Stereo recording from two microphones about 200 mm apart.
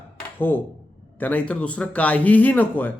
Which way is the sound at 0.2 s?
10° left (ahead or behind).